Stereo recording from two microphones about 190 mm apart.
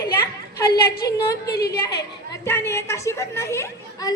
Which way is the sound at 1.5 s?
55° left (ahead or behind).